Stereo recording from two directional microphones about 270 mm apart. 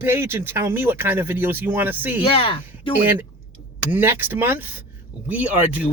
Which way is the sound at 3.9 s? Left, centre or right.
Centre.